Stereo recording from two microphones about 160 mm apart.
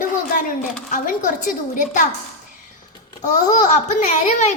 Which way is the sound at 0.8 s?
55° left (ahead or behind).